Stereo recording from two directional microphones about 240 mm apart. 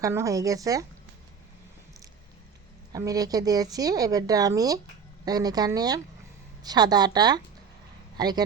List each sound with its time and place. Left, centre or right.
0.0 s speech: centre
2.9 s speech: centre